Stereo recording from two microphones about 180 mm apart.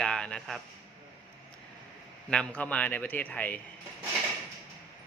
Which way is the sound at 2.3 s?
5° left (ahead or behind).